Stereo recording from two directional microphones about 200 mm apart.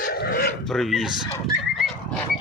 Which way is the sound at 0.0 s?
45° left (ahead or behind).